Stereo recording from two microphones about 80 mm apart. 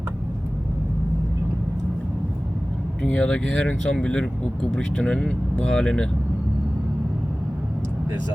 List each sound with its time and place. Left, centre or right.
3.0 s speech: centre